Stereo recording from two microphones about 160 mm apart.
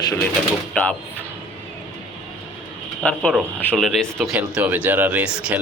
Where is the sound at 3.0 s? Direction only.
5° left (ahead or behind).